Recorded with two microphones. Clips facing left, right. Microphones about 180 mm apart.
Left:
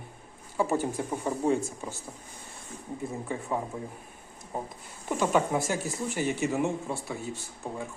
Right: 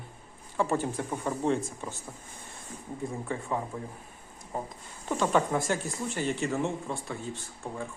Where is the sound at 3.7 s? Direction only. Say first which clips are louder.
Left 1 dB; 15° left (ahead or behind).